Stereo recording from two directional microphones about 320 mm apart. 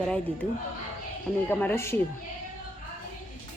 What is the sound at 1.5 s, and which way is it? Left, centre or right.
Speech, centre.